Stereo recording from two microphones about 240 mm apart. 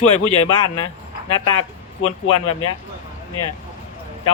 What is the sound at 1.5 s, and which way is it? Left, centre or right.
Speech, left.